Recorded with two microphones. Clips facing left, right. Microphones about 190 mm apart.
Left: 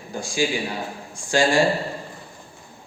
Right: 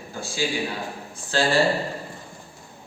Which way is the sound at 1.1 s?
15° left (ahead or behind).